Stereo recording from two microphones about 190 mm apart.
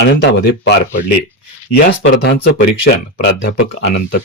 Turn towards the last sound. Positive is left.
turn(degrees=50)  # may be behind; listen again after turning